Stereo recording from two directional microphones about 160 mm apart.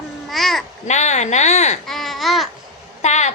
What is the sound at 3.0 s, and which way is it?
Speech, 45° left (ahead or behind).